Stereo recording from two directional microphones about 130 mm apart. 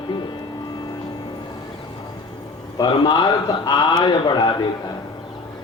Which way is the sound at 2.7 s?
35° left (ahead or behind).